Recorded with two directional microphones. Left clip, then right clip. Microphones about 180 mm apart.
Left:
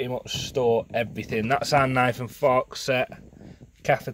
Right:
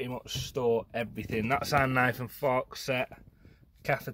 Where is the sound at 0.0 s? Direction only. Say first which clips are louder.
Left 7 dB; 30° left (ahead or behind).